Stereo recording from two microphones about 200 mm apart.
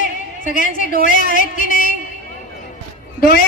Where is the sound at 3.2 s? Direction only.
50° left (ahead or behind).